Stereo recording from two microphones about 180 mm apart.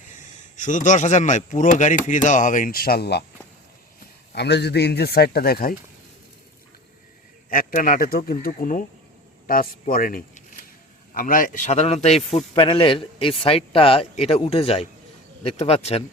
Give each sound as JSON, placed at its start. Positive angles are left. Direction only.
{"t": 0.5, "sound": "speech", "side_deg": 45}
{"t": 4.3, "sound": "a man's voice", "side_deg": 70}
{"t": 7.5, "sound": "a man's voice", "side_deg": 50}